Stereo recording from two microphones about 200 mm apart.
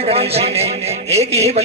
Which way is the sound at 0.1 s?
30° right (ahead or behind).